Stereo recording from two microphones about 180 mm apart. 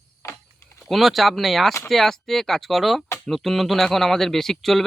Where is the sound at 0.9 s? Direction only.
Centre (ahead or behind).